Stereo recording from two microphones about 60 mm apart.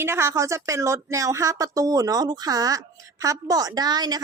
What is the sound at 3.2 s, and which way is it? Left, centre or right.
Speech, right.